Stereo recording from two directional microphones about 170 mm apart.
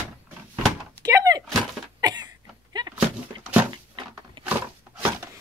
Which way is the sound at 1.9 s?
25° right (ahead or behind).